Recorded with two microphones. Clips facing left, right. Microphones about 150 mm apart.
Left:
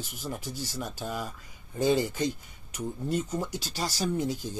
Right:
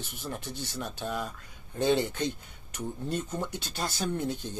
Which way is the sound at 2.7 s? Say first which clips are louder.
Left 3 dB; 10° left (ahead or behind).